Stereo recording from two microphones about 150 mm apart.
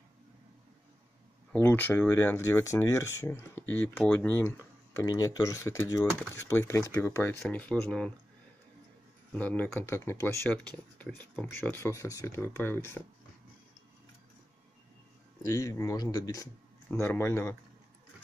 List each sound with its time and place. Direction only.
1.5 s speech: 15° left (ahead or behind)
7.4 s speech: 5° left (ahead or behind)
9.3 s speech: 10° left (ahead or behind)
15.4 s speech: 20° left (ahead or behind)